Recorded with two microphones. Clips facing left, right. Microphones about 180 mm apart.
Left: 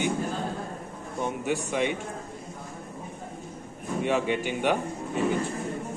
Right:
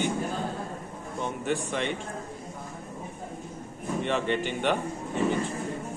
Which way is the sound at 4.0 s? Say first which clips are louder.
Left 2 dB; 10° left (ahead or behind).